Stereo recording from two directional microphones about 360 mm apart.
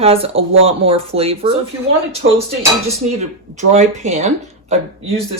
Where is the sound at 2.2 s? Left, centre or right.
Right.